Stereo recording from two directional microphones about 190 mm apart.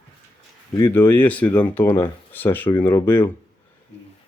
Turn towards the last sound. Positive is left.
turn(degrees=10)  # may be behind; listen again after turning